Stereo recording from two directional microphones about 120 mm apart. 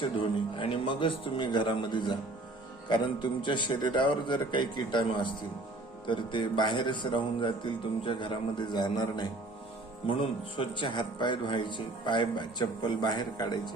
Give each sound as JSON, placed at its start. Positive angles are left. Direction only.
{"t": 0.0, "sound": "speech", "side_deg": 45}